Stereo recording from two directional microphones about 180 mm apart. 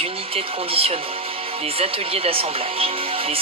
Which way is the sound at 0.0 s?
30° right (ahead or behind).